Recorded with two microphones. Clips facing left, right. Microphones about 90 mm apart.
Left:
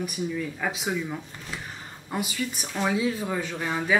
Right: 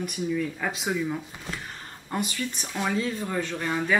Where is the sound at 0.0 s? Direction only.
5° left (ahead or behind).